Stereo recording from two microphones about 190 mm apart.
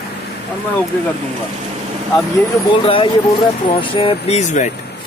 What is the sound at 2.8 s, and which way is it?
Speech, 30° left (ahead or behind).